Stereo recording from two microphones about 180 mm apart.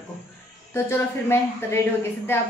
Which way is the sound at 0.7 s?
15° left (ahead or behind).